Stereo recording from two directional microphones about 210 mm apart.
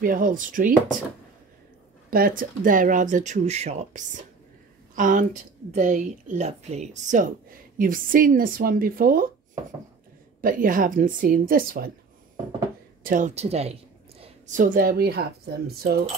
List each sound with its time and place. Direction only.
0.0 s a woman's voice: 40° right (ahead or behind)
2.0 s a woman's voice: 45° right (ahead or behind)
10.4 s a woman's voice: 40° right (ahead or behind)
13.0 s a woman's voice: 40° right (ahead or behind)